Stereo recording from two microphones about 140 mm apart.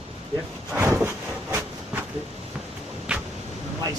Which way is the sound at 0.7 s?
15° right (ahead or behind).